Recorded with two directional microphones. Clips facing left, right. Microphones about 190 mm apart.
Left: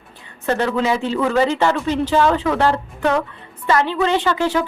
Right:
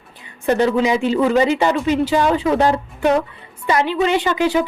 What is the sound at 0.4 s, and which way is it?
A woman's voice, 15° right (ahead or behind).